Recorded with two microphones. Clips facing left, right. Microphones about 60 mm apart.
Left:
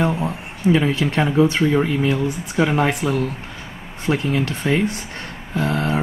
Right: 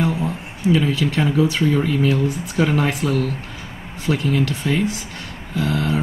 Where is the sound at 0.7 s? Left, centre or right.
Left.